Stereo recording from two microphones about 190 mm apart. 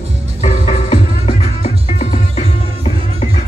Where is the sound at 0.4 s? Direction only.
40° left (ahead or behind).